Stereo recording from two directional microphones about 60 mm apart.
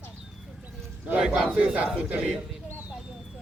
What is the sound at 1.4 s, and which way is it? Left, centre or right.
Speech, right.